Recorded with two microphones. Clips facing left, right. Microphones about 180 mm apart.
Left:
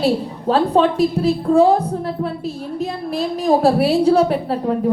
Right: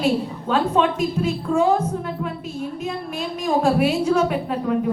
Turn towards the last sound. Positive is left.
turn(degrees=35)  # may be behind; listen again after turning